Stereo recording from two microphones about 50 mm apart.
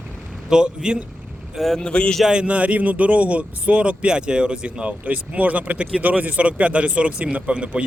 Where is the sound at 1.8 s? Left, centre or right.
Centre.